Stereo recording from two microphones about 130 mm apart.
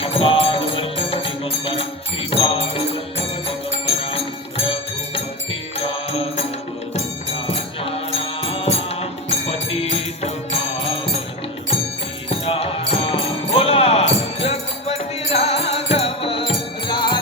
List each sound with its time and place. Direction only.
0.0 s music: 45° left (ahead or behind)
7.4 s music: 45° left (ahead or behind)
12.5 s music: 45° left (ahead or behind)